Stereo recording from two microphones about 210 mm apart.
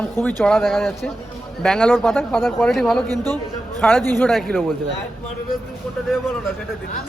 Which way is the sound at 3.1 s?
20° right (ahead or behind).